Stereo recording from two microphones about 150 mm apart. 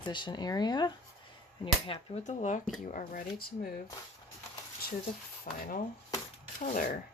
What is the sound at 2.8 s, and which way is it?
Speech, 70° left (ahead or behind).